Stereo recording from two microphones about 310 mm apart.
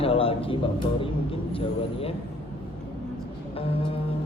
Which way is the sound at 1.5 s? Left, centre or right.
Centre.